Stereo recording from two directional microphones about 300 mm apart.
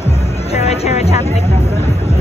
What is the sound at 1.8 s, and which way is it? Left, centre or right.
Vehicle, left.